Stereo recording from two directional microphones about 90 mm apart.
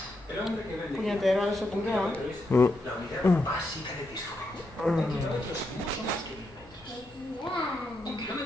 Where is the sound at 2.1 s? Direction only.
20° left (ahead or behind).